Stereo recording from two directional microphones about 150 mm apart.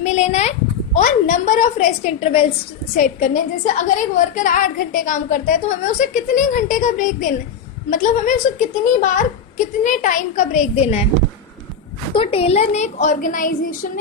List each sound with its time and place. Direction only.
0.0 s speech: 50° left (ahead or behind)
3.0 s a woman's voice: 55° left (ahead or behind)
12.2 s speech: 40° left (ahead or behind); by 13.7 s 65° left (ahead or behind)